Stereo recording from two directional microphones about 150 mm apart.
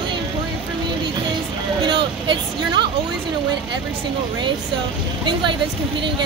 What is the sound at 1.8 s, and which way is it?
Vehicle, 30° right (ahead or behind).